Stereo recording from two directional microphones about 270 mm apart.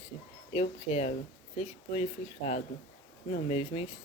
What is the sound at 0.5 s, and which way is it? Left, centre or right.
Speech, left.